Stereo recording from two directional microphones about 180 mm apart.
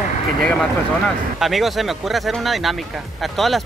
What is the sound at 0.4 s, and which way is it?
Speech, 5° left (ahead or behind).